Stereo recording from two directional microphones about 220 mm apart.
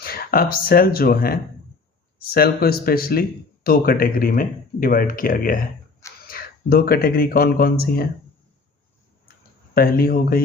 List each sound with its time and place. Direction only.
0.0 s speech: 45° left (ahead or behind)
9.7 s speech: 40° left (ahead or behind)